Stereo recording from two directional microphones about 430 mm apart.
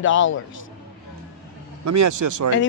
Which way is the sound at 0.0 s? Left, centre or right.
Left.